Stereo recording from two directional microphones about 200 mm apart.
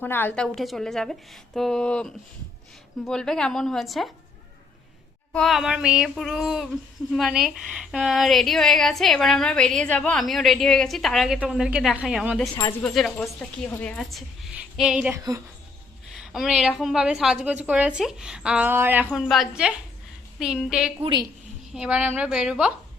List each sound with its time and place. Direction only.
0.0 s a woman's voice: 10° left (ahead or behind)
5.3 s a woman's voice: centre (ahead or behind)
21.0 s a woman's voice: 20° right (ahead or behind)
21.7 s a woman's voice: 5° right (ahead or behind)